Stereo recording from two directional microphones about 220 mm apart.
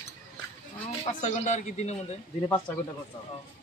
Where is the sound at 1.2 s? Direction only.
30° left (ahead or behind).